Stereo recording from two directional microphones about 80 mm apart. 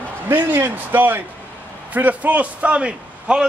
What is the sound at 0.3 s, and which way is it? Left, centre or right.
A man's voice, right.